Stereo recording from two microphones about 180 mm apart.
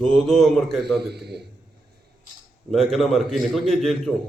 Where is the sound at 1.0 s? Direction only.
65° right (ahead or behind).